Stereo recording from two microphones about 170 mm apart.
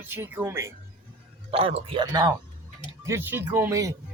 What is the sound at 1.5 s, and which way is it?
Speech, 35° right (ahead or behind).